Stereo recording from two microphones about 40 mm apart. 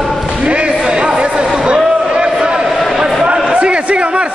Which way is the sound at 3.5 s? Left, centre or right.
Right.